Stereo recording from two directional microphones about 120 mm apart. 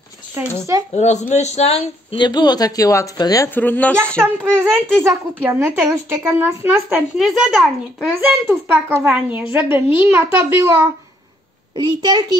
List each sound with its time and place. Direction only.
0.4 s speech: 15° right (ahead or behind)
0.9 s speech: 70° left (ahead or behind)
2.1 s speech: 40° left (ahead or behind)
3.4 s speech: 15° left (ahead or behind)
4.2 s a woman's voice: 15° right (ahead or behind)
7.2 s a child's voice: 5° right (ahead or behind)
8.2 s speech: 15° right (ahead or behind)
12.0 s a child's voice: 40° right (ahead or behind)